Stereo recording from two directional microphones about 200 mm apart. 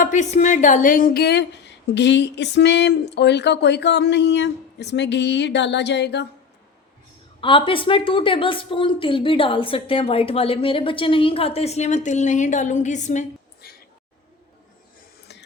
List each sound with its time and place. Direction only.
0.0 s a woman's voice: 35° left (ahead or behind); by 6.2 s 55° left (ahead or behind)
7.4 s a woman's voice: 25° left (ahead or behind)